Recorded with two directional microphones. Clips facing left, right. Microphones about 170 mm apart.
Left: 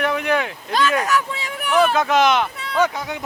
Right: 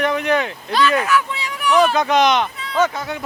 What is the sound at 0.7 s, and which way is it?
Speech, 45° left (ahead or behind).